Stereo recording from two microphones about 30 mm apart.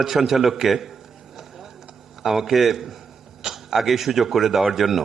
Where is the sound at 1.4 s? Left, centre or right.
Centre.